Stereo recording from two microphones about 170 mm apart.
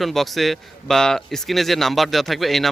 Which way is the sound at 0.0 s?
Centre (ahead or behind).